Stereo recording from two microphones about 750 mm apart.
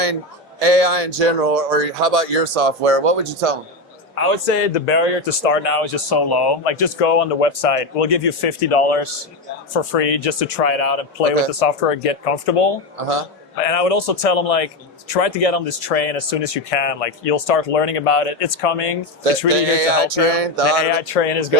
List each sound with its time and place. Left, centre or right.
0.6 s speech: right
4.1 s speech: left
6.1 s speech: left
19.5 s speech: right
21.0 s speech: left